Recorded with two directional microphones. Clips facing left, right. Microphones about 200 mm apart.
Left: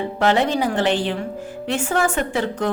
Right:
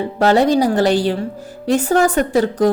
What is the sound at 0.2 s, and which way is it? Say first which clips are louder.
A woman's voice: right 6 dB; 40° right (ahead or behind).